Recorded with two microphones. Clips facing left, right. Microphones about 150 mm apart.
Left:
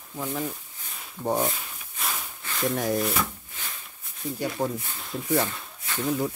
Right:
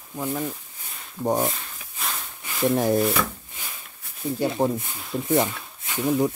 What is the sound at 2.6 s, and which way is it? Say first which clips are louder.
Speech: right 5 dB; 30° right (ahead or behind).